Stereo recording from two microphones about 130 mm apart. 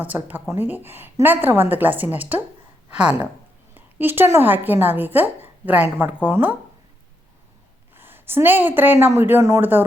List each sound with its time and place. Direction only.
0.0 s a woman's voice: 15° right (ahead or behind)
7.9 s a woman's voice: 15° right (ahead or behind)